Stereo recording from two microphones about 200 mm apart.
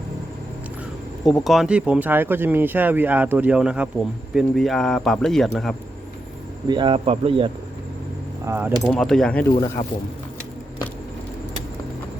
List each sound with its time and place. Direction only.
1.2 s speech: centre (ahead or behind)
6.7 s speech: 25° right (ahead or behind)
8.4 s speech: 10° right (ahead or behind)
8.8 s speech: centre (ahead or behind)
9.8 s speech: 25° left (ahead or behind)